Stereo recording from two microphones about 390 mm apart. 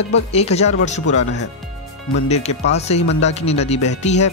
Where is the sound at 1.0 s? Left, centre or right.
Left.